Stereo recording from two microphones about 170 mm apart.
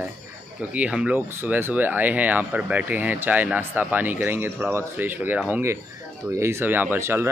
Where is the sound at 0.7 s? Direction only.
5° right (ahead or behind).